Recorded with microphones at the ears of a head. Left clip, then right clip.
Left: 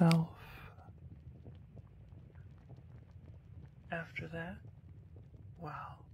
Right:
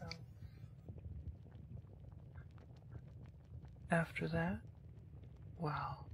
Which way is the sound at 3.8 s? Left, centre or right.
Right.